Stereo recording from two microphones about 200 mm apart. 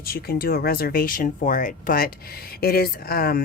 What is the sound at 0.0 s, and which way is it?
Speech, 50° left (ahead or behind).